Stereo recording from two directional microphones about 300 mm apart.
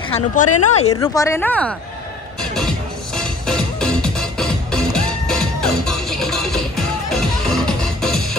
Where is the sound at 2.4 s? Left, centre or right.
Centre.